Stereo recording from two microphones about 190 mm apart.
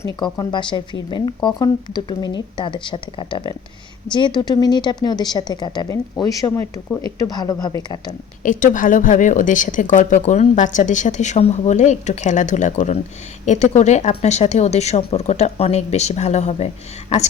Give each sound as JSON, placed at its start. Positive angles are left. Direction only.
{"t": 0.0, "sound": "speech", "side_deg": 20}
{"t": 8.4, "sound": "speech", "side_deg": 45}